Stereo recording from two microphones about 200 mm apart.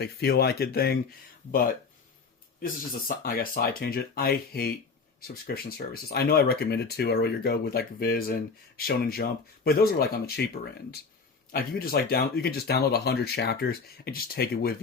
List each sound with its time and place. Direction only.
0.0 s speech: 55° left (ahead or behind)
11.5 s speech: 50° left (ahead or behind)